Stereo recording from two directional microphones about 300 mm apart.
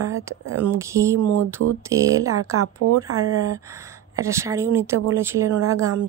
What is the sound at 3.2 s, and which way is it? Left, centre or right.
Speech, centre.